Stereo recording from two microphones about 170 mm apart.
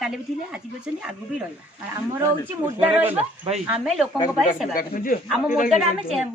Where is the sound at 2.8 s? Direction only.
15° right (ahead or behind).